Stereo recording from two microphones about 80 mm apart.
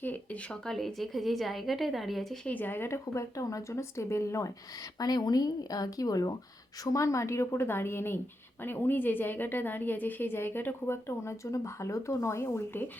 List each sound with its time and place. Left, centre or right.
0.0 s a sound: left
0.5 s a woman's voice: centre
2.4 s speech: left
4.9 s a woman's voice: left